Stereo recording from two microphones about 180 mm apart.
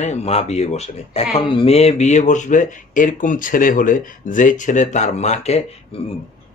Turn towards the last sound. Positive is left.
turn(degrees=35)  # may be behind; listen again after turning